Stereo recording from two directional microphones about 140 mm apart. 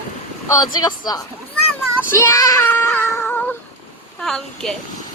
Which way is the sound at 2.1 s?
20° left (ahead or behind).